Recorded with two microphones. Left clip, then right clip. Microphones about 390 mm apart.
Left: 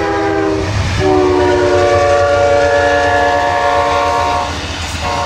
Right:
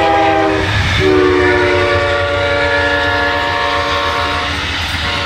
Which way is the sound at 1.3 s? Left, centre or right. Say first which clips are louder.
Left 1 dB; left.